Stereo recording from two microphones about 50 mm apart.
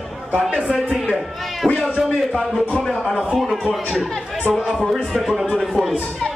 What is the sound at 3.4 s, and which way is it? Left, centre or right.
Speech, centre.